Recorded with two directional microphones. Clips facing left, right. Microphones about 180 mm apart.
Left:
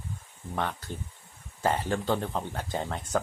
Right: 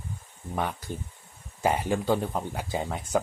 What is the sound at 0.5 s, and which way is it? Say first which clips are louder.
Speech: right 2 dB; 10° right (ahead or behind).